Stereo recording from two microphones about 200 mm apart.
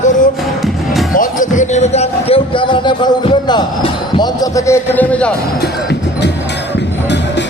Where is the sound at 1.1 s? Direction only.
40° left (ahead or behind); by 5.3 s 5° left (ahead or behind).